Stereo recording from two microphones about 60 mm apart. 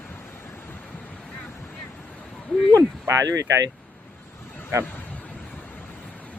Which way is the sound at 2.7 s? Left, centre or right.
Right.